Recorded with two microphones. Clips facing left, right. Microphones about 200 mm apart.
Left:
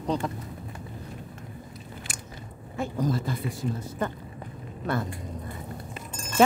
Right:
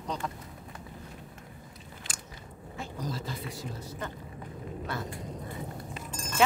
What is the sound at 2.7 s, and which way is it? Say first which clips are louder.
Speech: left 9 dB; 55° left (ahead or behind).